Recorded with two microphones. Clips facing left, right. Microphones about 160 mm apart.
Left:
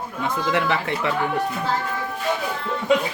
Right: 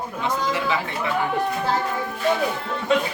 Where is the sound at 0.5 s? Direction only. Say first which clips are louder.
Left 2 dB; 65° left (ahead or behind).